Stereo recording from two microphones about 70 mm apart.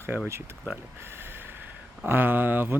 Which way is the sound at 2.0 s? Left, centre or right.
Right.